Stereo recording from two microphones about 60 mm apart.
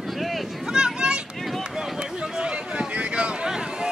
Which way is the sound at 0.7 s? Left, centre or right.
Centre.